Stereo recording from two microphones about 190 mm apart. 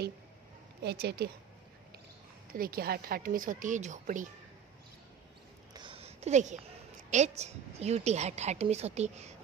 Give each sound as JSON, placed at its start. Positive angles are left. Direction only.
{"t": 0.8, "sound": "speech", "side_deg": -55}
{"t": 2.5, "sound": "a woman's voice", "side_deg": -50}
{"t": 5.7, "sound": "a sound", "side_deg": -25}
{"t": 7.1, "sound": "a woman's voice", "side_deg": -35}